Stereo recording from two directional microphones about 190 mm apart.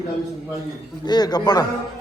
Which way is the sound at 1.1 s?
20° left (ahead or behind).